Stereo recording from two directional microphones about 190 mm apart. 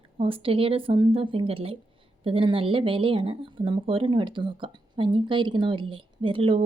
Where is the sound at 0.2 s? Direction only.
30° right (ahead or behind).